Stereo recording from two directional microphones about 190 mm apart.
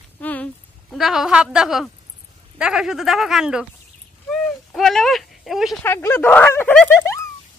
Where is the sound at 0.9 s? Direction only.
Centre (ahead or behind).